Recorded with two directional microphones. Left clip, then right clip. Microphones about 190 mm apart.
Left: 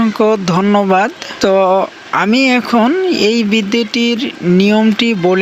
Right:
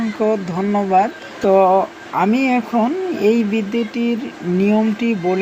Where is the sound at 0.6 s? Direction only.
45° left (ahead or behind).